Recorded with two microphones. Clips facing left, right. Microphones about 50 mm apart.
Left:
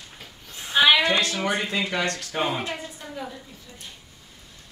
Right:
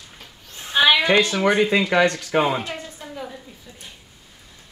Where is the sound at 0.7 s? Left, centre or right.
Centre.